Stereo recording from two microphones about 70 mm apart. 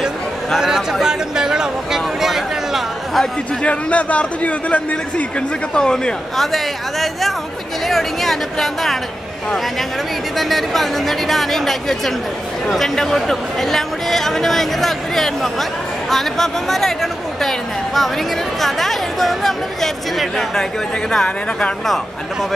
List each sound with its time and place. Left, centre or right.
0.6 s a sound: centre
3.6 s a man's voice: centre
10.3 s speech: centre